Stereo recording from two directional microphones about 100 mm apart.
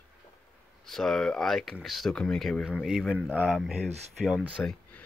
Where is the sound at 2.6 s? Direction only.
5° right (ahead or behind).